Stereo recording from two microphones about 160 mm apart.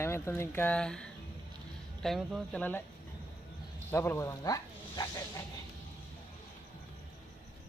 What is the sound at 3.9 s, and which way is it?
Speech, 15° left (ahead or behind).